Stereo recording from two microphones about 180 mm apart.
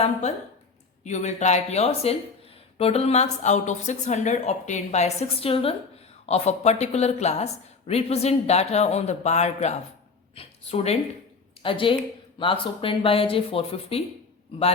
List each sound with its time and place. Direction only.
0.0 s speech: 40° left (ahead or behind)